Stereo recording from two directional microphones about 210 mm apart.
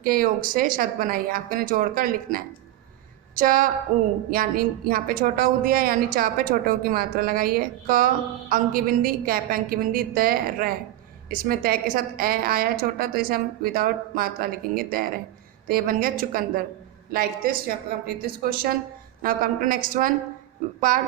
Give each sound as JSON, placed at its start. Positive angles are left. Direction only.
{"t": 0.0, "sound": "a woman's voice", "side_deg": -40}